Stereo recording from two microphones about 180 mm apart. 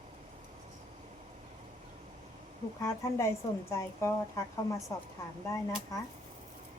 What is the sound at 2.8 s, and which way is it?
A woman's voice, 15° left (ahead or behind).